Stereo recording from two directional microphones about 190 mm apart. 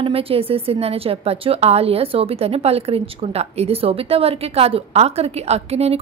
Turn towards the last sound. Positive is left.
turn(degrees=-35)  # may be behind; listen again after turning